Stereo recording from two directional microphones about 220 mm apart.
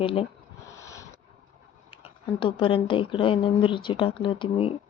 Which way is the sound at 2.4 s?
25° left (ahead or behind).